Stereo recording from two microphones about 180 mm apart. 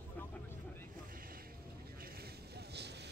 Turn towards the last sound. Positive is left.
turn(degrees=-70)  # may be behind; listen again after turning